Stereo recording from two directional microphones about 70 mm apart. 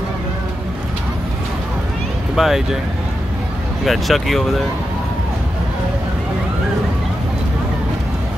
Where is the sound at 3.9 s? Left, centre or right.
Centre.